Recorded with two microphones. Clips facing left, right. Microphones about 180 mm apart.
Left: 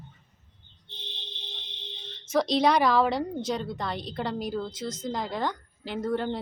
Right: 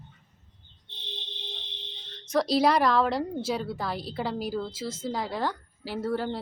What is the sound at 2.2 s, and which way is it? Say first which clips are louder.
A woman's voice: even; centre (ahead or behind).